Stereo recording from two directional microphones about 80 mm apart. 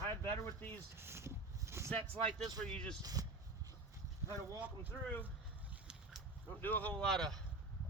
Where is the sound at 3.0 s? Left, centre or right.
Right.